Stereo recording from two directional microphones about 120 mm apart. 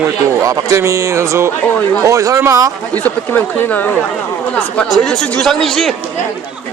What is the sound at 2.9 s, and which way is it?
Speech, 15° left (ahead or behind).